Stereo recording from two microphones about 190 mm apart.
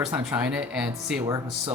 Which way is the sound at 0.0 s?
5° right (ahead or behind).